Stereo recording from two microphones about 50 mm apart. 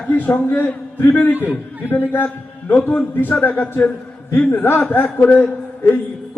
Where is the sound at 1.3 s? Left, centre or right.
Right.